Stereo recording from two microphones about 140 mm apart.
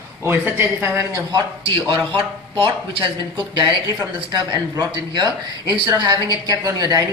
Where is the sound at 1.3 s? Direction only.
40° right (ahead or behind).